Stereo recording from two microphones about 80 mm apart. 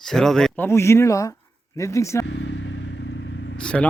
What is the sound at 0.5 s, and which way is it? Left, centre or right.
Speech, left.